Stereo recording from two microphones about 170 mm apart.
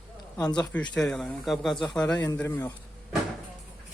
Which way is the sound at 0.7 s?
5° left (ahead or behind).